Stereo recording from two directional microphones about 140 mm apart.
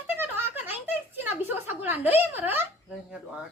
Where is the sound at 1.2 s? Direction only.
15° right (ahead or behind).